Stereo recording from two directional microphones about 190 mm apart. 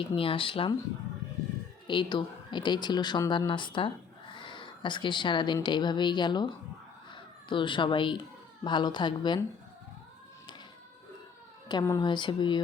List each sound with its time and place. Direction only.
0.0 s speech: 30° left (ahead or behind)
1.9 s speech: 25° left (ahead or behind)
11.7 s speech: 20° left (ahead or behind)